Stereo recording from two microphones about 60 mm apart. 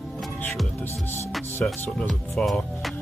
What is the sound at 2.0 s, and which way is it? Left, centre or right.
Music, centre.